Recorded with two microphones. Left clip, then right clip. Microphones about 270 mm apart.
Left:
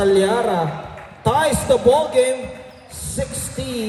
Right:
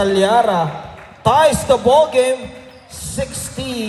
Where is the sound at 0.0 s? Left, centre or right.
Right.